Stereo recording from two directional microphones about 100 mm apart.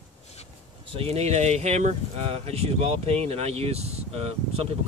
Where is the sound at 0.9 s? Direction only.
90° right.